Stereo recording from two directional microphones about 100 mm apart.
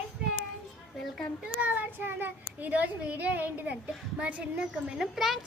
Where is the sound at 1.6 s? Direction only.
15° right (ahead or behind).